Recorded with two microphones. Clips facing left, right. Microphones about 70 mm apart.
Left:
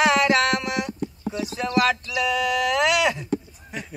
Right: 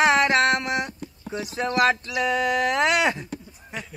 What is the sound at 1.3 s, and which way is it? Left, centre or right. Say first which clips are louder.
Speech: even; right.